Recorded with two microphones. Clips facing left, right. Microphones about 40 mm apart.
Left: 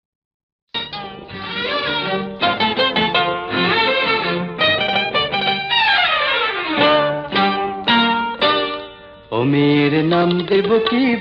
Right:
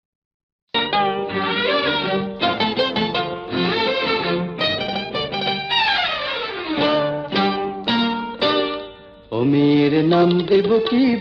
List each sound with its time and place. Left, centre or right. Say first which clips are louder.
1.5 s music: even; centre
2.0 s music: left 1 dB; centre
2.6 s music: left 3 dB; left
4.6 s music: left 6 dB; left; by 6.0 s centre
6.0 s music: left 6 dB; left
7.9 s music: left 6 dB; left
9.3 s music: left 1 dB; left